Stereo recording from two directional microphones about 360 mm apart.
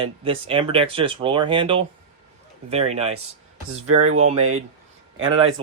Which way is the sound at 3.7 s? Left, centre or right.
Right.